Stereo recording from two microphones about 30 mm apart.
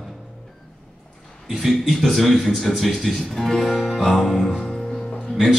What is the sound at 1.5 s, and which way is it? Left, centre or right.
Speech, centre.